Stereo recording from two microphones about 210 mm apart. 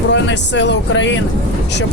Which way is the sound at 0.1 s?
60° left (ahead or behind).